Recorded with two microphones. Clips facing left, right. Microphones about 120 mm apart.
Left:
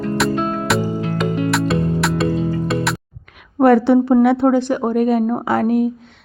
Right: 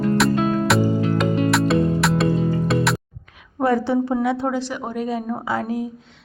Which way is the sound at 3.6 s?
70° left (ahead or behind).